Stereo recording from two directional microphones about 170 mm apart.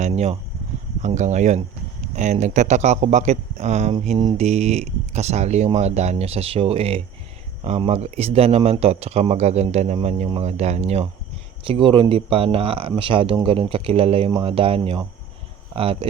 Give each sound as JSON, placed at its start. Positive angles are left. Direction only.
{"t": 0.0, "sound": "speech", "side_deg": -40}